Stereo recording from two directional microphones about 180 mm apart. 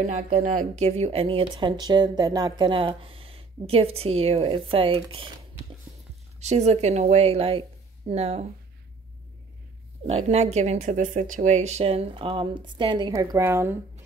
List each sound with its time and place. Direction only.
0.0 s speech: 40° right (ahead or behind)
6.4 s speech: 40° right (ahead or behind)
10.0 s speech: 35° right (ahead or behind); by 13.7 s 15° right (ahead or behind)